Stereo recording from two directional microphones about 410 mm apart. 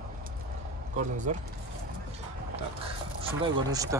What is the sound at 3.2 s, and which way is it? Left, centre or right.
Speech, centre.